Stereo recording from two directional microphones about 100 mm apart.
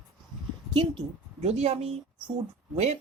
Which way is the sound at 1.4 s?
90° right.